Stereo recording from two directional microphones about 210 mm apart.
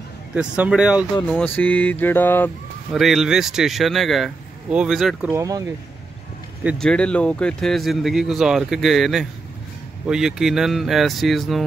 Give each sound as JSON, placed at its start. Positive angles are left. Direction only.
{"t": 0.3, "sound": "speech", "side_deg": -5}
{"t": 1.4, "sound": "mantra", "side_deg": 10}
{"t": 2.9, "sound": "speech", "side_deg": 0}
{"t": 5.4, "sound": "speech", "side_deg": -15}
{"t": 6.6, "sound": "speech", "side_deg": 0}